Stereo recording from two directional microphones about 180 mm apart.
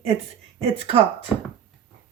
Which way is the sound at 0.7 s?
35° right (ahead or behind).